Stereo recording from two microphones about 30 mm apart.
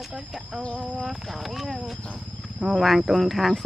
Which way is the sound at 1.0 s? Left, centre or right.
Centre.